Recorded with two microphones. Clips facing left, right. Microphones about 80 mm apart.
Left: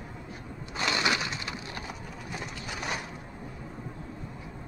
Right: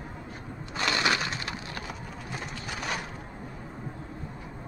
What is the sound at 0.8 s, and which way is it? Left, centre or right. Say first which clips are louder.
Crushing: right 1 dB; centre.